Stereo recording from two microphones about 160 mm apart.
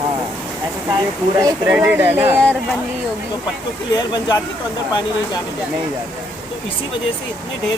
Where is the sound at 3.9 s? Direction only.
25° left (ahead or behind).